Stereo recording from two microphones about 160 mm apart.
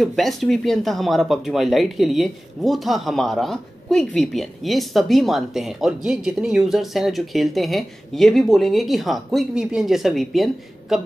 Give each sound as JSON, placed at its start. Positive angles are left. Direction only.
{"t": 0.0, "sound": "speech", "side_deg": 0}